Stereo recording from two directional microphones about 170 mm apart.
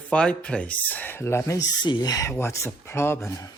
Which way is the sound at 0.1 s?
5° left (ahead or behind).